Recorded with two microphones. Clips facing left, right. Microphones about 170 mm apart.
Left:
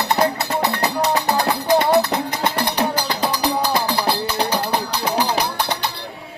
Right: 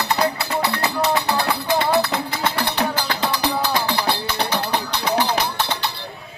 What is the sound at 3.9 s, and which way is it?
Music, 35° left (ahead or behind).